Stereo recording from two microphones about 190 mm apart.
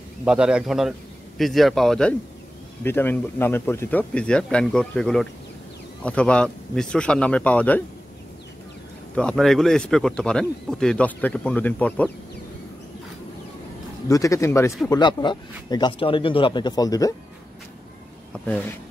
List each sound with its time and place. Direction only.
0.2 s speech: 5° right (ahead or behind)
9.1 s speech: 5° left (ahead or behind)
14.0 s speech: 15° left (ahead or behind)
18.3 s speech: 10° left (ahead or behind)